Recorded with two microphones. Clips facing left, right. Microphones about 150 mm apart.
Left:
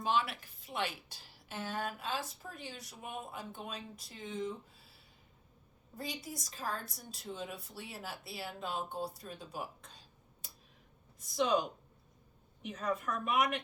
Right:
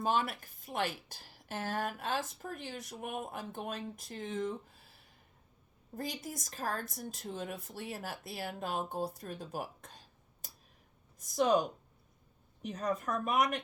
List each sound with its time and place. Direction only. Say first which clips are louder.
0.0 s a woman's voice: right 1 dB; 45° right (ahead or behind)
6.0 s a woman's voice: right 2 dB; 45° right (ahead or behind)
10.4 s a sound: right 3 dB; 45° right (ahead or behind)
12.6 s speech: right 2 dB; 40° right (ahead or behind)